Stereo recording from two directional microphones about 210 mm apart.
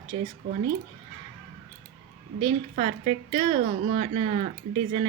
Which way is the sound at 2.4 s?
30° right (ahead or behind).